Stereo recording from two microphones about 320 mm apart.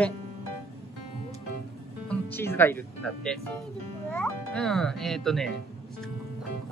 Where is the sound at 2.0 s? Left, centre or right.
Centre.